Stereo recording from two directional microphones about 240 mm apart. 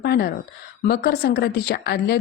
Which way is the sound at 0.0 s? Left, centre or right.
Left.